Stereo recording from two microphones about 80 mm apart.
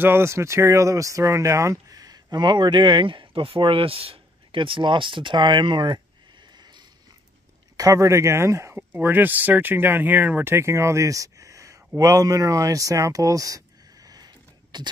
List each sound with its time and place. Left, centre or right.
0.0 s speech: right
7.7 s speech: right
8.7 s speech: right
14.0 s a sound: right